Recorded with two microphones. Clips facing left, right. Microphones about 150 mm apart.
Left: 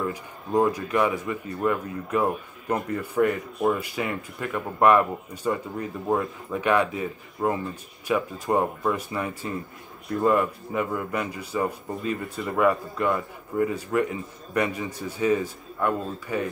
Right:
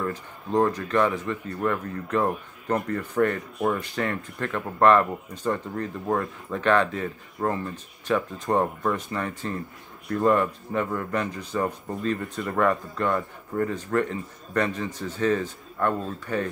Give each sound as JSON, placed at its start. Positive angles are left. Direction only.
{"t": 0.0, "sound": "speech", "side_deg": 10}